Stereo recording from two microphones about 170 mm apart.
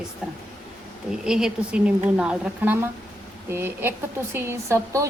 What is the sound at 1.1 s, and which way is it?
A woman's voice, 5° right (ahead or behind).